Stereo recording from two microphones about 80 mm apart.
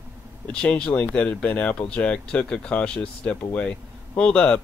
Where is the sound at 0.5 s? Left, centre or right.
Centre.